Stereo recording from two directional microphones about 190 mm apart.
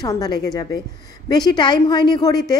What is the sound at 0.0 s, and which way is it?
A woman's voice, 20° left (ahead or behind).